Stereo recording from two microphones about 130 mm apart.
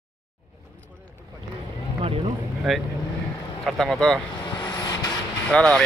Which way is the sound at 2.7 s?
Centre (ahead or behind).